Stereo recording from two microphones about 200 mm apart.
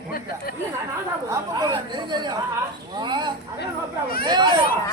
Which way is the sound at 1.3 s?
25° right (ahead or behind).